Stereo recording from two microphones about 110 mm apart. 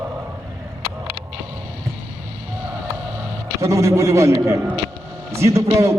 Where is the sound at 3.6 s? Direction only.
30° right (ahead or behind).